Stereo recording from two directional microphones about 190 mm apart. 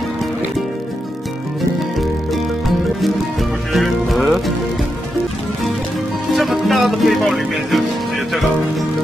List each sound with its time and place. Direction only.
3.7 s music: centre (ahead or behind)
6.3 s music: centre (ahead or behind)